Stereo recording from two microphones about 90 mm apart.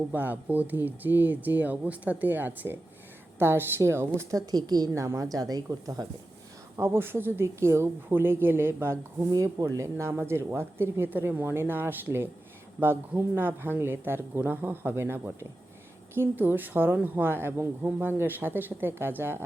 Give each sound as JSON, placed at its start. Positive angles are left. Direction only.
{"t": 0.1, "sound": "speech", "side_deg": -20}
{"t": 4.3, "sound": "speech", "side_deg": -45}
{"t": 5.0, "sound": "speech", "side_deg": -35}
{"t": 6.7, "sound": "speech", "side_deg": -30}
{"t": 9.3, "sound": "speech", "side_deg": -40}